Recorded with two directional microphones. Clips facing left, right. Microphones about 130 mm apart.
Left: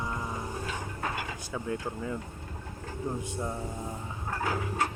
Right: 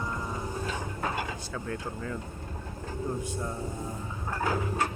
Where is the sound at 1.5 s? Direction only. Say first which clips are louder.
Left 2 dB; 15° left (ahead or behind).